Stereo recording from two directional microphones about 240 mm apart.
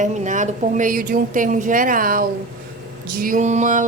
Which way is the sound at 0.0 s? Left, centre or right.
Right.